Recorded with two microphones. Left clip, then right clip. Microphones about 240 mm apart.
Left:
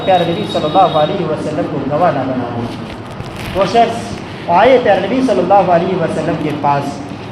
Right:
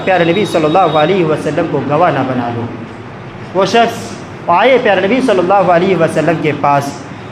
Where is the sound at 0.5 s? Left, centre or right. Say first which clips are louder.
Right 3 dB; right.